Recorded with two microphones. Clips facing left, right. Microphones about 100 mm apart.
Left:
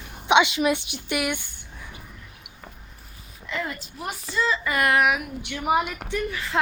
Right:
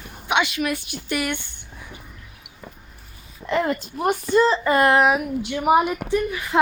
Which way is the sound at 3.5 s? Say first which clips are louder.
Right 9 dB; 50° right (ahead or behind).